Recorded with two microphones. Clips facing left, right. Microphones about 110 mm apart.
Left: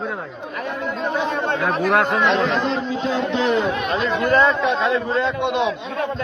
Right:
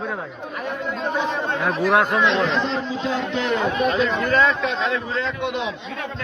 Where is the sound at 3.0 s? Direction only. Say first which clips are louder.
Left 4 dB; 40° left (ahead or behind).